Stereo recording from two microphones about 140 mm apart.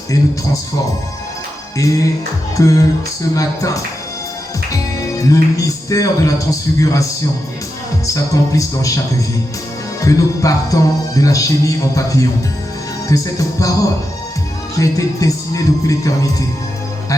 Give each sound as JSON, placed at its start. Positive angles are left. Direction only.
{"t": 0.1, "sound": "music", "side_deg": 25}
{"t": 1.8, "sound": "music", "side_deg": 25}
{"t": 4.9, "sound": "music", "side_deg": 25}
{"t": 10.0, "sound": "music", "side_deg": 25}